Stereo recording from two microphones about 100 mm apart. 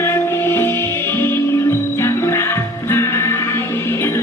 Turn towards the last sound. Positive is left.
turn(degrees=25)  # may be behind; listen again after turning